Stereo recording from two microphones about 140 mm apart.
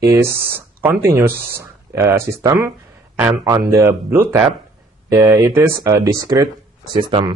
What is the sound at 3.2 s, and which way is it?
Speech, 5° right (ahead or behind).